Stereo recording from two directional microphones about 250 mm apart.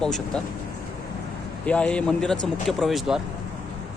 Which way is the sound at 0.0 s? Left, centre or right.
Centre.